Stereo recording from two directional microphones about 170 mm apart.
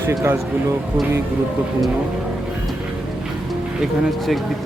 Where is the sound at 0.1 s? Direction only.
20° right (ahead or behind).